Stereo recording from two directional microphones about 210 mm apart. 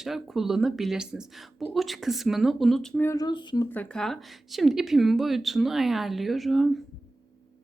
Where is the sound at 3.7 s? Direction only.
5° left (ahead or behind).